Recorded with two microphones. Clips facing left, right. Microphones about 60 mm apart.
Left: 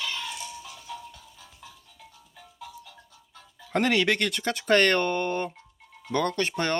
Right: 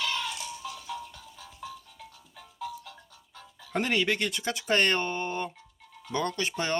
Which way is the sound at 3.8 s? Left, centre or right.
Left.